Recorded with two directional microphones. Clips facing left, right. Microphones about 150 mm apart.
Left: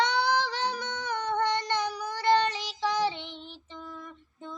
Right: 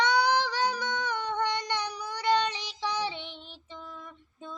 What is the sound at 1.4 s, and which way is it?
Child singing, 15° right (ahead or behind).